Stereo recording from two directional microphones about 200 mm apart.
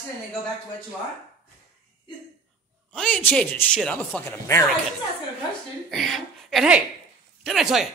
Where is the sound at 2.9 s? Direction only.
5° left (ahead or behind).